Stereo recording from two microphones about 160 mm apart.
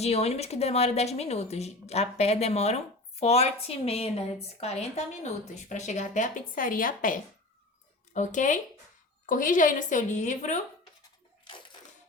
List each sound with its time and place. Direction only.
0.0 s a woman's voice: 40° left (ahead or behind)